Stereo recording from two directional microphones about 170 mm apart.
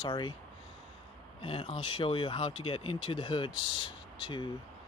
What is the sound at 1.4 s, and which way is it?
Speech, 30° left (ahead or behind).